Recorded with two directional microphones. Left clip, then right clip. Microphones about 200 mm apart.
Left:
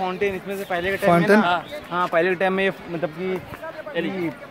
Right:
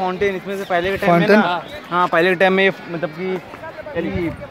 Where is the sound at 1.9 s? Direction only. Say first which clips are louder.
Right 5 dB; 50° right (ahead or behind).